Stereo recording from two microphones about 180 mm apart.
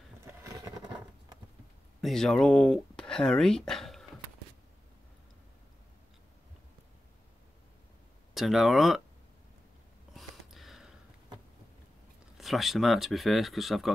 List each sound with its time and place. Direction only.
0.2 s vehicle: 15° right (ahead or behind)
2.0 s speech: centre (ahead or behind)
8.4 s speech: centre (ahead or behind)
10.1 s gasp: centre (ahead or behind)
12.4 s speech: centre (ahead or behind)